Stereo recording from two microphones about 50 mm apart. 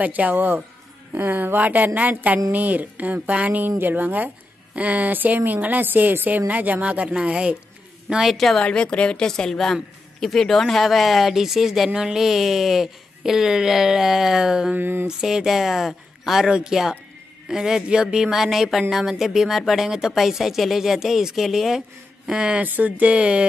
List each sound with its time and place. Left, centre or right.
0.0 s a woman's voice: right
8.3 s speech: centre
8.6 s a woman's voice: left; by 14.7 s centre
14.7 s a sound: right
15.0 s speech: centre
16.4 s speech: centre
22.6 s speech: right